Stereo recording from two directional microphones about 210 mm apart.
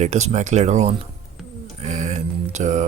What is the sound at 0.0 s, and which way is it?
Speech, 30° right (ahead or behind).